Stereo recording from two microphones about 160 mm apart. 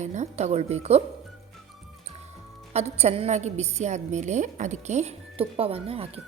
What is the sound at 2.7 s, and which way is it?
A woman's voice, 40° right (ahead or behind).